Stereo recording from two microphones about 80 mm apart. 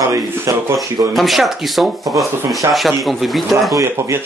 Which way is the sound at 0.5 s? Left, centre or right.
Right.